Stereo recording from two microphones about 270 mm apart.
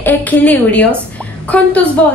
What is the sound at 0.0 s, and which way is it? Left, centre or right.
A woman's voice, centre.